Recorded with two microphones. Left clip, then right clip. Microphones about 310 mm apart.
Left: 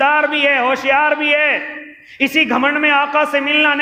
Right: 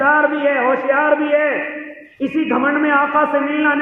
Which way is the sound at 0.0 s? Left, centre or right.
Left.